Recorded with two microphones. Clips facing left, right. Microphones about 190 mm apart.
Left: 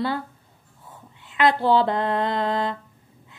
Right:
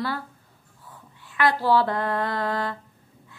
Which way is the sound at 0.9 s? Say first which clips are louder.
Left 2 dB; 20° left (ahead or behind).